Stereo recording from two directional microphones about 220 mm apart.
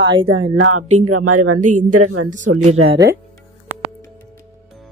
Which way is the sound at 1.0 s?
90° right.